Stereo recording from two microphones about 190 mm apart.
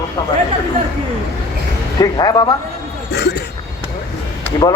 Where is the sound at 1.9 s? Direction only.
20° left (ahead or behind).